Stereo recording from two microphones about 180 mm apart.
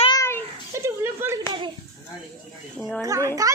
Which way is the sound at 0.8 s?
15° right (ahead or behind).